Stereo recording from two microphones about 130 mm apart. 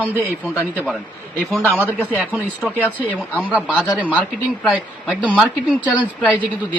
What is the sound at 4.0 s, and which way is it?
Speech, 10° right (ahead or behind).